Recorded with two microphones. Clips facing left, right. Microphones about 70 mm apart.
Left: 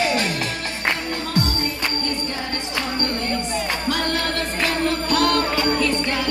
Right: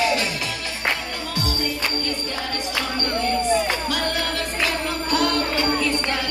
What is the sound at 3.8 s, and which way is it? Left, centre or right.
Music, left.